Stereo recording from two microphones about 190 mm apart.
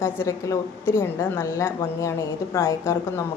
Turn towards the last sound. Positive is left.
turn(degrees=15)  # may be behind; listen again after turning